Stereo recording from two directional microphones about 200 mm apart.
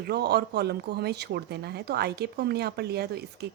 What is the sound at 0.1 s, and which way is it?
Speech, 55° right (ahead or behind).